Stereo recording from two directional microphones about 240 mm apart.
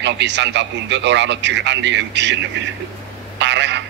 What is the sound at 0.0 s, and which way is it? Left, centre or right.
A man's voice, right.